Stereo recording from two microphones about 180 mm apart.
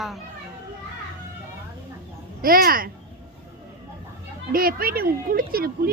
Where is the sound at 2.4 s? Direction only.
55° right (ahead or behind).